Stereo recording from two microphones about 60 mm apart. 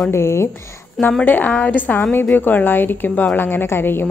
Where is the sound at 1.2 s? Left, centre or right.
Left.